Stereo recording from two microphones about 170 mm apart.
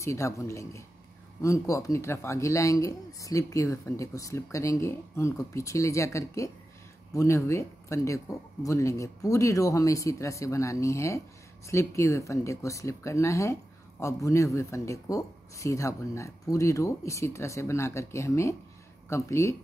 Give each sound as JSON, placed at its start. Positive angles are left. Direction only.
{"t": 0.0, "sound": "speech", "side_deg": 15}